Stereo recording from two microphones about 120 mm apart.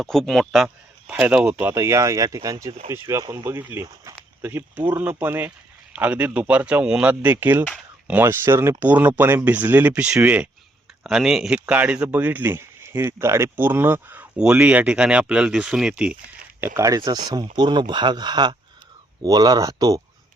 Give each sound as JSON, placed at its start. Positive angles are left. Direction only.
{"t": 0.0, "sound": "a man's voice", "side_deg": 5}
{"t": 16.6, "sound": "speech", "side_deg": -20}